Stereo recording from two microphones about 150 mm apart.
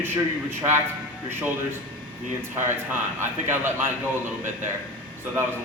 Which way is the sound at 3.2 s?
15° right (ahead or behind).